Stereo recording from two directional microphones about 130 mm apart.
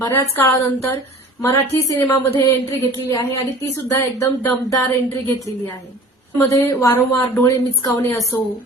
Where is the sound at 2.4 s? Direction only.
25° left (ahead or behind).